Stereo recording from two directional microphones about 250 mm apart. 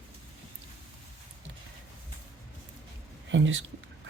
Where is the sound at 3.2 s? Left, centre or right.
Right.